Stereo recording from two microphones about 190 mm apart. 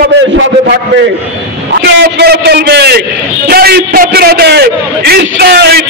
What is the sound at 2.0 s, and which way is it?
A man's voice, 60° right (ahead or behind).